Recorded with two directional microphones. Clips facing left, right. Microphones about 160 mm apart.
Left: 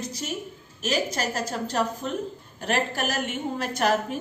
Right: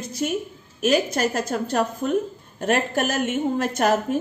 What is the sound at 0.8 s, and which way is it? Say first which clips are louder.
A woman's voice: right 6 dB; 55° right (ahead or behind).